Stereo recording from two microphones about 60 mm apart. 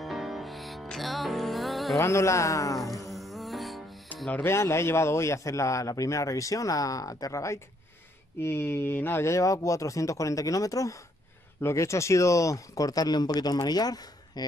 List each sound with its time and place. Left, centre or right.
0.0 s music: centre
2.0 s a man's voice: left
3.1 s music: centre
4.1 s music: left
4.5 s a man's voice: left
8.4 s a man's voice: left
11.6 s speech: left